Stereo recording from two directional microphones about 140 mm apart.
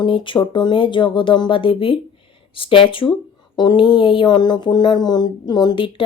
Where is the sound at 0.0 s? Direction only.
35° left (ahead or behind).